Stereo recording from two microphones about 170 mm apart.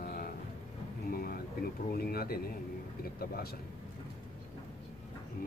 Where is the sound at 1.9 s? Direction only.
65° left (ahead or behind).